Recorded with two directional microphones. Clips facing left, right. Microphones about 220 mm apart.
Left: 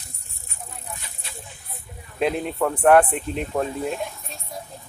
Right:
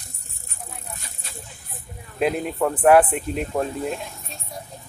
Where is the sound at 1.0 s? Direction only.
45° right (ahead or behind).